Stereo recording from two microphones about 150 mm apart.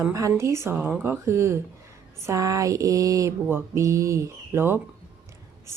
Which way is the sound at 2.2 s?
20° right (ahead or behind).